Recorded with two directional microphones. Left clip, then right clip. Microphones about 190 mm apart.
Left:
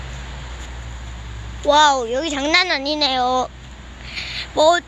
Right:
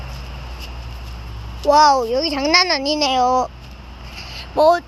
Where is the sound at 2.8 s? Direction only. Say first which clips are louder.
Right 1 dB; 20° left (ahead or behind).